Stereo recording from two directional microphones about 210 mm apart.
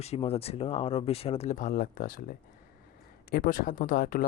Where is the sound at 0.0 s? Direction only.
30° left (ahead or behind).